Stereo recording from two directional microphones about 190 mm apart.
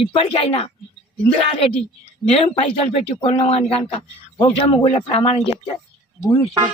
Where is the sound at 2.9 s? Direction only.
25° left (ahead or behind).